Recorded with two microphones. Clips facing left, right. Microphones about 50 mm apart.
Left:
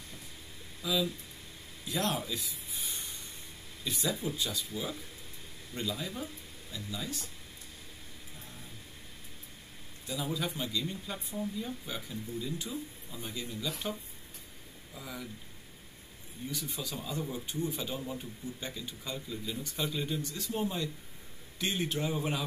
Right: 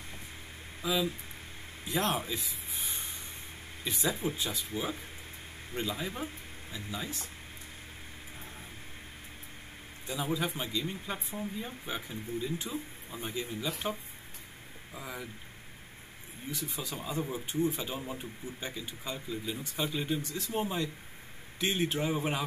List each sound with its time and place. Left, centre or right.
0.8 s speech: right
10.0 s speech: right
15.0 s speech: right
16.6 s speech: right